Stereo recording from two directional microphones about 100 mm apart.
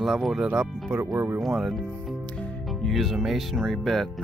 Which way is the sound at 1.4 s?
Centre (ahead or behind).